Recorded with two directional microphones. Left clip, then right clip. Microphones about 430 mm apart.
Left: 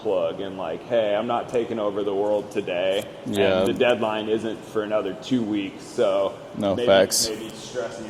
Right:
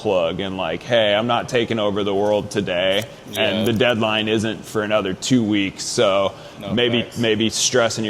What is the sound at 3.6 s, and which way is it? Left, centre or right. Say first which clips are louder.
Speech: right 2 dB; right.